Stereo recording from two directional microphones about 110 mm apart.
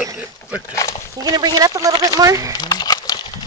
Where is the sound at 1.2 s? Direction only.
35° right (ahead or behind).